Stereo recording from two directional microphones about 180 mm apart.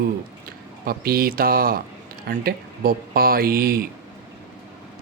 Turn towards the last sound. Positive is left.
turn(degrees=-55)  # may be behind; listen again after turning